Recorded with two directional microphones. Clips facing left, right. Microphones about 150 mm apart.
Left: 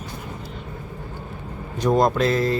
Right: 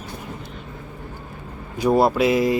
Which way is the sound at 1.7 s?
10° right (ahead or behind).